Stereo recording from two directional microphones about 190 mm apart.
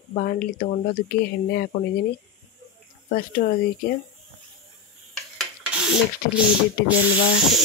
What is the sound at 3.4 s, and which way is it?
Speech, 40° left (ahead or behind).